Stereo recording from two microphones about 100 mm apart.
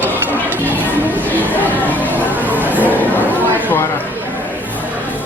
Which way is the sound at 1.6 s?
15° left (ahead or behind).